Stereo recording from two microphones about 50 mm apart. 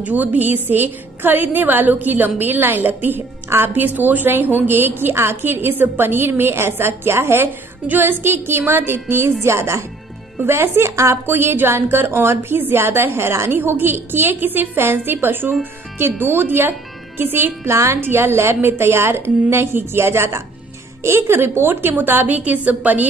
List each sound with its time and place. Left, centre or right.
0.0 s a woman's voice: right
3.4 s a woman's voice: right
3.7 s a woman's voice: right
7.8 s a woman's voice: right
9.4 s a woman's voice: right
10.4 s a woman's voice: right
13.5 s a woman's voice: right
17.6 s speech: right
18.0 s a woman's voice: right